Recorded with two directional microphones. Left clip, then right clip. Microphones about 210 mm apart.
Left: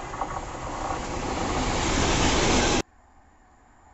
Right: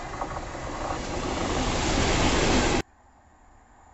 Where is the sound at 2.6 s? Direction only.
50° left (ahead or behind).